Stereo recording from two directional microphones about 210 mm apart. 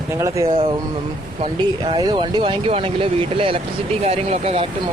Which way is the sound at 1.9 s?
20° right (ahead or behind).